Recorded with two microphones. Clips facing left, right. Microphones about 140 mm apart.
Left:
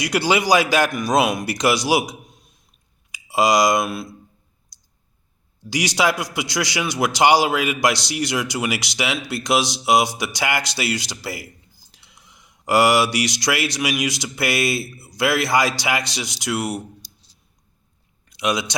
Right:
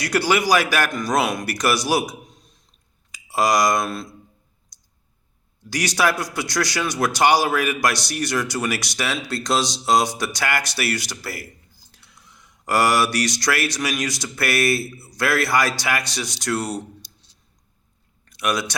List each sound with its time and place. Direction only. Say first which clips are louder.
0.0 s a man's voice: even; 15° left (ahead or behind)
5.7 s a man's voice: left 1 dB; 15° left (ahead or behind)
18.3 s speech: left 1 dB; 15° left (ahead or behind)